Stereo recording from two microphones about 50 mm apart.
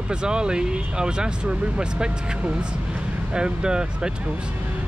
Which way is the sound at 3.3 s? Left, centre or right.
Centre.